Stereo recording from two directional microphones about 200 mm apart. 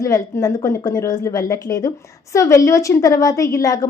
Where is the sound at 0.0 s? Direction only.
15° left (ahead or behind).